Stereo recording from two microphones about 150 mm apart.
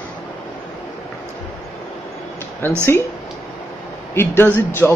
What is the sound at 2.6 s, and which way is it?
Speech, 15° left (ahead or behind).